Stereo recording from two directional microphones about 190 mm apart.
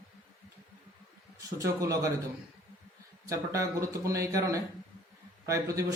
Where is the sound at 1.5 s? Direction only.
15° right (ahead or behind).